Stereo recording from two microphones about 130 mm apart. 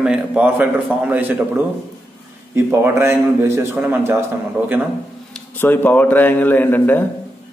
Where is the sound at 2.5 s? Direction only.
20° right (ahead or behind).